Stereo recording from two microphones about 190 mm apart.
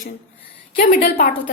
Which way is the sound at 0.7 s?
45° left (ahead or behind).